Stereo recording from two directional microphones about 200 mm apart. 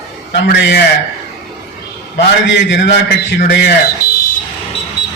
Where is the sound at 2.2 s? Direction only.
60° left (ahead or behind).